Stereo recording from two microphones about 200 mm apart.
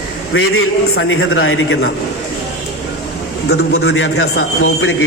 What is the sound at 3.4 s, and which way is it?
A man's voice, 55° left (ahead or behind).